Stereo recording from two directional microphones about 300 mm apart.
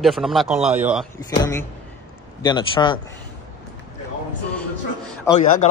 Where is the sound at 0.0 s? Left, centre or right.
Centre.